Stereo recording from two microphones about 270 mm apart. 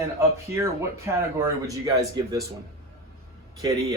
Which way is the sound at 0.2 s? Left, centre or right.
Centre.